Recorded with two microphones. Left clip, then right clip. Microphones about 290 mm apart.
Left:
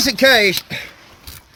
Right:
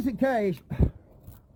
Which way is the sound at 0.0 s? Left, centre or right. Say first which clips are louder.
Left 14 dB; centre.